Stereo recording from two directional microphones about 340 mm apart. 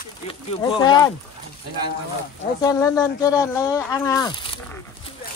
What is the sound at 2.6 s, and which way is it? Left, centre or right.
Speech, centre.